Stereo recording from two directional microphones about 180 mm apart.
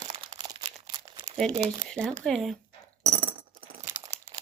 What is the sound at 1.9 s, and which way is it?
Speech, 5° left (ahead or behind).